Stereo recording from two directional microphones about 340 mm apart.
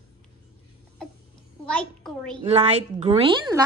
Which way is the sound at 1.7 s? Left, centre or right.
Centre.